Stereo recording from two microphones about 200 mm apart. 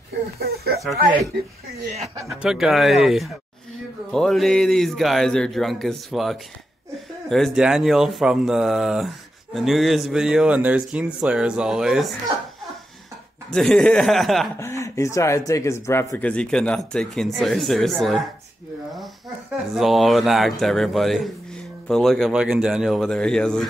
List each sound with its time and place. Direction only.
0.4 s speech: 50° right (ahead or behind)
2.4 s speech: centre (ahead or behind)
13.5 s speech: centre (ahead or behind)
14.6 s speech: 15° left (ahead or behind)